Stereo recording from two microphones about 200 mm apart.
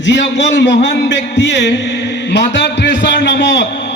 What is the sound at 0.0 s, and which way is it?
A man's voice, 60° left (ahead or behind).